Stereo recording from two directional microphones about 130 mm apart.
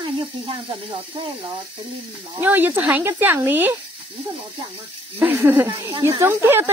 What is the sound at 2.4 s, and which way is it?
Speech, 15° right (ahead or behind).